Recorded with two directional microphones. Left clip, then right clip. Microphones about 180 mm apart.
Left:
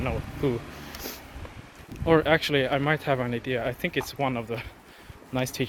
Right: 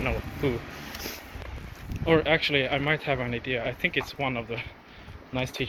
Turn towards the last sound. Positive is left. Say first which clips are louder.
# left 2 dB
turn(degrees=65)  # may be behind; listen again after turning